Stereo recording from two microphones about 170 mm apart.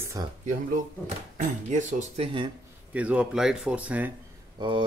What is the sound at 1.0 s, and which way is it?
Speech, 45° right (ahead or behind).